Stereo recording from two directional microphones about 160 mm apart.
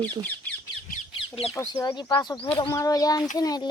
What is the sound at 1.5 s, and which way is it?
Speech, 20° left (ahead or behind).